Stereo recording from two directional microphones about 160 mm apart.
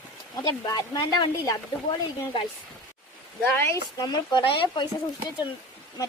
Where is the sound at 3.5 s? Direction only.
20° left (ahead or behind).